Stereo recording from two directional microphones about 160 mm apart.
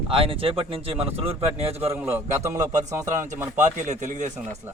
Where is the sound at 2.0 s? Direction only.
15° right (ahead or behind).